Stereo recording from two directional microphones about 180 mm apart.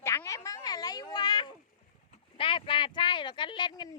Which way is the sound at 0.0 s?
15° left (ahead or behind).